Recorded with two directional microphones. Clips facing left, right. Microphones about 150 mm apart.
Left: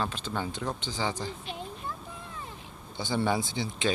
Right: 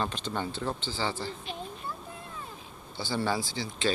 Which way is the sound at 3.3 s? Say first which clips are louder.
Left 2 dB; 20° left (ahead or behind).